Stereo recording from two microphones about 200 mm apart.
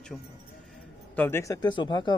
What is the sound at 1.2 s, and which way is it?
Speech, 10° left (ahead or behind).